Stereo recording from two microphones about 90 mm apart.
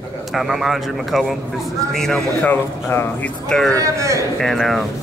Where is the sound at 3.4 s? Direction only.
5° left (ahead or behind).